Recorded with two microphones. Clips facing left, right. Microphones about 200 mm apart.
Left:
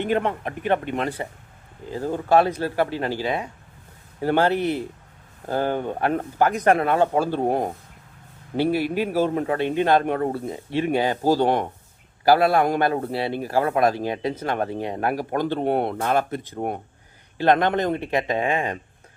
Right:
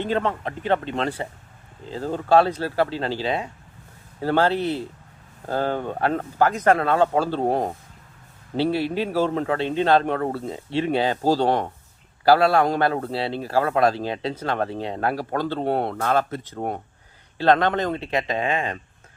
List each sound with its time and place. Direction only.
0.0 s a man's voice: 15° left (ahead or behind)